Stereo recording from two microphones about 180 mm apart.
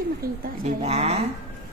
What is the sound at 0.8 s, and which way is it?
Speech, 35° right (ahead or behind).